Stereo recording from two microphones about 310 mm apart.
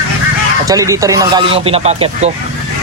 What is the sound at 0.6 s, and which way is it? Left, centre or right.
Speech, centre.